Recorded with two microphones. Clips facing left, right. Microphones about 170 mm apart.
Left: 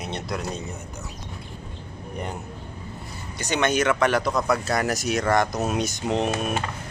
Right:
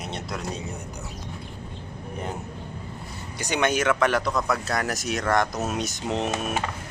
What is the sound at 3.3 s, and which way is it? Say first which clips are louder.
Speech: left 1 dB; 10° right (ahead or behind).